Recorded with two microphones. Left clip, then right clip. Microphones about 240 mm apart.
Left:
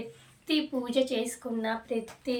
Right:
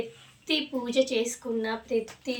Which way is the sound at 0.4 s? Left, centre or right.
Centre.